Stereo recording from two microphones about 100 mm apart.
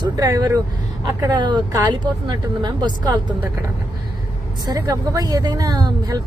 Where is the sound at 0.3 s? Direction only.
35° right (ahead or behind).